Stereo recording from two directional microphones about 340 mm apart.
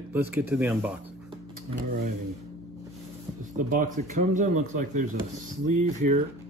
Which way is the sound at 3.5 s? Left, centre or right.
Right.